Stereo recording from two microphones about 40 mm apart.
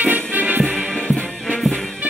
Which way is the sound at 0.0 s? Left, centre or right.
Right.